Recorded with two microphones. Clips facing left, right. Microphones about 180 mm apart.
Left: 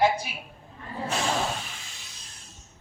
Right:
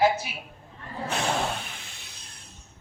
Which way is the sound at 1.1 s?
60° right (ahead or behind).